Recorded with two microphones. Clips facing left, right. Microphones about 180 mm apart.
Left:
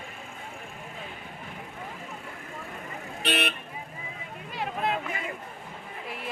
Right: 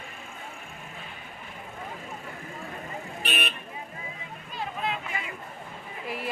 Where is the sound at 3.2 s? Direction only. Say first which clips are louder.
Left 5 dB; 70° left (ahead or behind).